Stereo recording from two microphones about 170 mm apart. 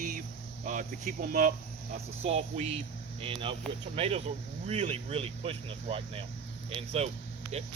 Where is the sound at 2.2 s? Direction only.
40° right (ahead or behind).